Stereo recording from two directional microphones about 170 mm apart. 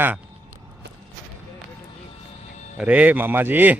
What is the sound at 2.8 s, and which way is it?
Speech, 10° right (ahead or behind).